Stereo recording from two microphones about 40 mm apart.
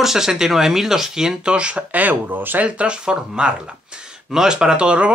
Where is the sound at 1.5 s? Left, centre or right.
Right.